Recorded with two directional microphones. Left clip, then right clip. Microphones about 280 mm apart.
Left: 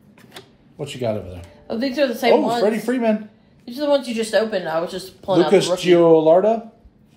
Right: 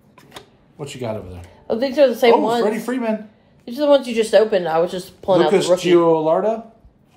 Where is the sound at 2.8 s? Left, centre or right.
Centre.